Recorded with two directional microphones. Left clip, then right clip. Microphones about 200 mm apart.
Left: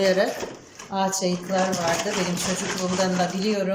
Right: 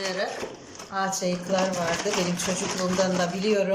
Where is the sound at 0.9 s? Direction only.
15° left (ahead or behind).